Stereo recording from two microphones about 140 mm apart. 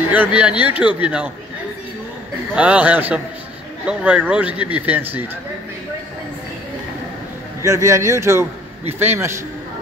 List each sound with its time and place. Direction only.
0.1 s a man's voice: 10° right (ahead or behind)
2.5 s a man's voice: 10° right (ahead or behind)
7.6 s a man's voice: 20° right (ahead or behind)